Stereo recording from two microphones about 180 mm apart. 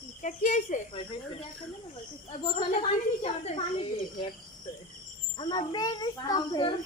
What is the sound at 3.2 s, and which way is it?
Speech, 35° left (ahead or behind).